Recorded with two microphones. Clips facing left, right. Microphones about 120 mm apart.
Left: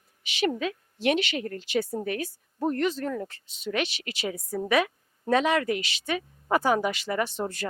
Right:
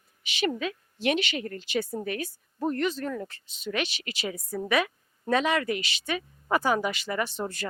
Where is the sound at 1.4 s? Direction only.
45° left (ahead or behind).